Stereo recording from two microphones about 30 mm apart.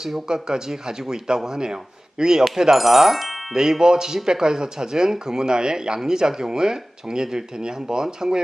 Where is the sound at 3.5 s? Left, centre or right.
Right.